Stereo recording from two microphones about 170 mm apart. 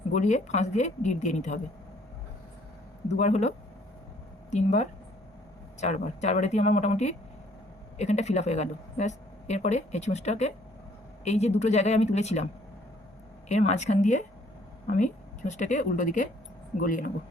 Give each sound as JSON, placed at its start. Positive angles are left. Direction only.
{"t": 0.1, "sound": "speech", "side_deg": 45}
{"t": 3.1, "sound": "speech", "side_deg": 40}
{"t": 4.5, "sound": "speech", "side_deg": 45}
{"t": 13.5, "sound": "speech", "side_deg": 40}